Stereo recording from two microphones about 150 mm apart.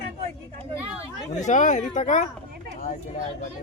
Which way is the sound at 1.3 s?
55° left (ahead or behind).